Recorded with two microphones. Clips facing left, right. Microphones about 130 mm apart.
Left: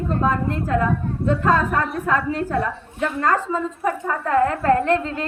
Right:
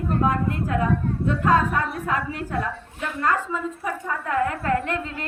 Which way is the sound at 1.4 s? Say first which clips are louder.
Even; 40° left (ahead or behind).